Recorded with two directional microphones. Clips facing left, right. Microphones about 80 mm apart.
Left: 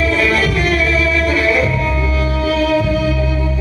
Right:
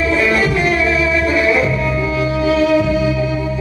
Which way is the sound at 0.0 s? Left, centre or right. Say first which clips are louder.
Even; right.